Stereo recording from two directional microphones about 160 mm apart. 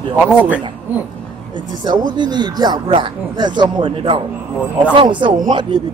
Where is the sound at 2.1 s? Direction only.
30° right (ahead or behind).